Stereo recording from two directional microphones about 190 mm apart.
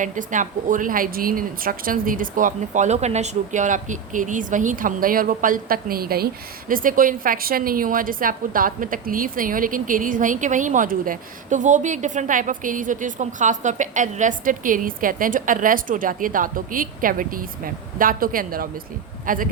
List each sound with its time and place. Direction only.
0.0 s a woman's voice: 40° right (ahead or behind)